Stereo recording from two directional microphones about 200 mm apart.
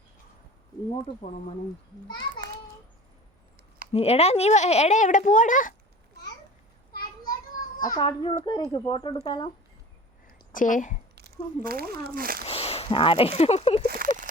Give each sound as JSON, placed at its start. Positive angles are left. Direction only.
{"t": 1.2, "sound": "speech", "side_deg": 30}
{"t": 3.9, "sound": "speech", "side_deg": 30}
{"t": 6.9, "sound": "a sound", "side_deg": 50}
{"t": 7.8, "sound": "speech", "side_deg": 20}
{"t": 10.2, "sound": "a sound", "side_deg": 45}
{"t": 11.1, "sound": "speech", "side_deg": -50}
{"t": 12.5, "sound": "speech", "side_deg": 30}
{"t": 13.8, "sound": "speech", "side_deg": -45}